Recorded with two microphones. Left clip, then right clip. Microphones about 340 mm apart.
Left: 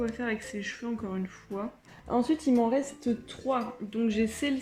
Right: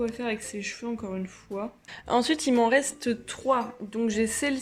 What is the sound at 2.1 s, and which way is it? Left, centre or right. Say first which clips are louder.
Speech: right 3 dB; right.